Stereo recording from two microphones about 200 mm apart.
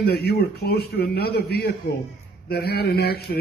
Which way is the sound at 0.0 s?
50° left (ahead or behind).